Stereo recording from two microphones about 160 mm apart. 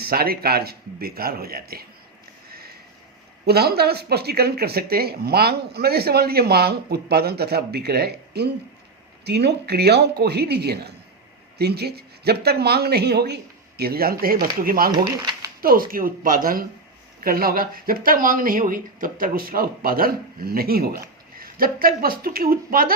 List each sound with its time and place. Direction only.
0.0 s speech: 70° right (ahead or behind)
3.4 s speech: 80° right; by 14.9 s 65° right (ahead or behind)
14.9 s speech: 25° right (ahead or behind)
15.6 s speech: 65° right (ahead or behind)